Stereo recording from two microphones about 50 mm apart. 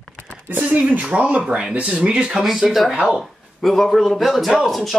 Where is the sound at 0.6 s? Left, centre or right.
Right.